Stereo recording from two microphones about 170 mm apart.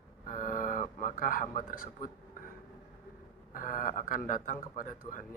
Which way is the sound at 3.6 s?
50° left (ahead or behind).